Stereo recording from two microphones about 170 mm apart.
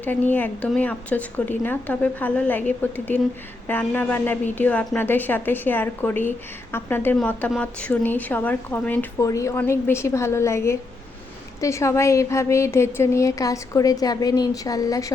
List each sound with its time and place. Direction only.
0.0 s a woman's voice: 10° left (ahead or behind)